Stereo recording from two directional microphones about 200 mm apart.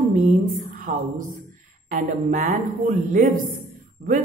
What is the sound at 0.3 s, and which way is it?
Speech, 40° right (ahead or behind).